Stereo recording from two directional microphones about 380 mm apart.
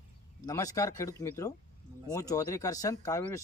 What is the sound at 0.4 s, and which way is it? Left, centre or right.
Speech, centre.